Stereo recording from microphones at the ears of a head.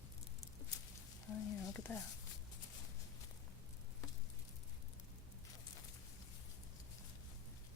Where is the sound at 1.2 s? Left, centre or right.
Left.